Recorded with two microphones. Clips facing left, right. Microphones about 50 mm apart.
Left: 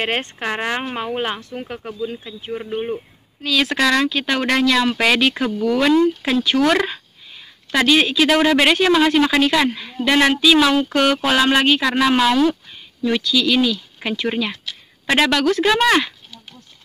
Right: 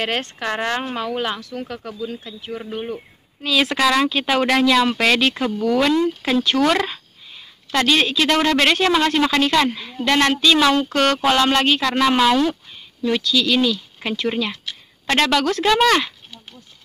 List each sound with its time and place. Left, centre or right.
0.0 s speech: left
3.4 s speech: centre